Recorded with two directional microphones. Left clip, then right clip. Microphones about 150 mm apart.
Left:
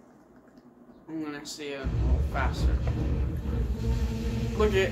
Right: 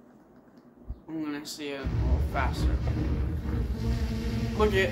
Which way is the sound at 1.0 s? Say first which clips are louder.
Right 1 dB; 15° right (ahead or behind).